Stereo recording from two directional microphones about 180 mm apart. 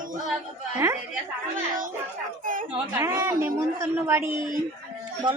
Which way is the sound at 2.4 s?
50° right (ahead or behind).